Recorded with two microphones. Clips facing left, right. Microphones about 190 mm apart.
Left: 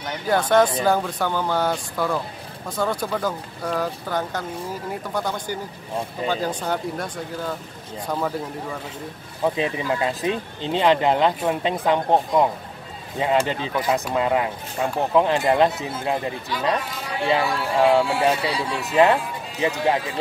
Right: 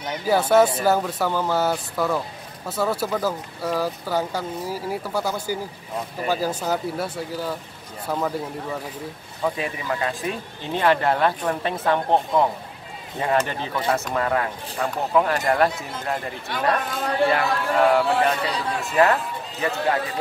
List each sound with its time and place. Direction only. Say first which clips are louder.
0.0 s speech: right 1 dB; 10° right (ahead or behind)
9.4 s speech: left 3 dB; 20° left (ahead or behind)
16.4 s speech: right 3 dB; 50° right (ahead or behind)
17.3 s speech: even; 15° left (ahead or behind)